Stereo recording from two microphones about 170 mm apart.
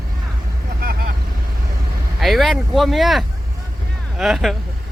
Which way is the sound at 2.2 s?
Centre (ahead or behind).